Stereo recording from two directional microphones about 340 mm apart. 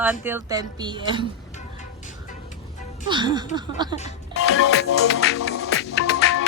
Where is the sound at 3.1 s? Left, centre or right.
Centre.